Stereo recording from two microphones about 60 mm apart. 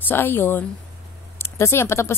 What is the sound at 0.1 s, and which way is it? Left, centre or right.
Speech, left.